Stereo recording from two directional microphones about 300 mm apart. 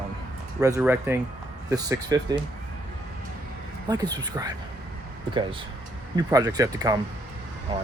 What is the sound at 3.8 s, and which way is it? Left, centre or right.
Speech, centre.